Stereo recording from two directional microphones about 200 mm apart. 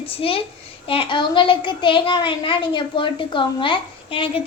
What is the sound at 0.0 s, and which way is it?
A child's voice, 25° left (ahead or behind).